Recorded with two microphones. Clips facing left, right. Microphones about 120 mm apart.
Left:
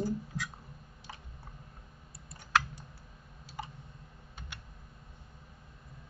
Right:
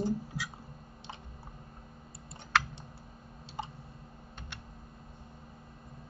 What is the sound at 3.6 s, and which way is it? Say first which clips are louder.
Clicking: right 2 dB; 25° right (ahead or behind).